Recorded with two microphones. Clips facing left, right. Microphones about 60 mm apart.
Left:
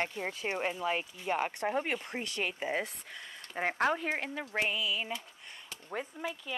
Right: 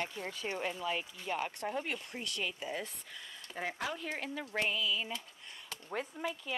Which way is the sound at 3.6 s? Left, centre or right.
Left.